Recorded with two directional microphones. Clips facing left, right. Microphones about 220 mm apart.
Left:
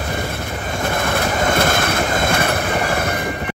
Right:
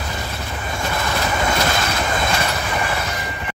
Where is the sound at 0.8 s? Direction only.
55° left (ahead or behind).